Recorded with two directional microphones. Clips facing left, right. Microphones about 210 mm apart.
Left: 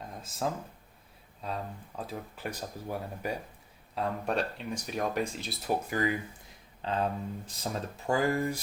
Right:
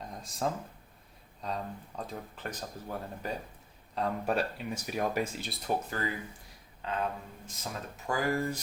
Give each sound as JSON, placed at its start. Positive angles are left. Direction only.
{"t": 0.0, "sound": "a sound", "side_deg": 0}
{"t": 1.4, "sound": "speech", "side_deg": 5}
{"t": 3.9, "sound": "speech", "side_deg": 0}
{"t": 5.9, "sound": "speech", "side_deg": 15}
{"t": 6.8, "sound": "speech", "side_deg": 30}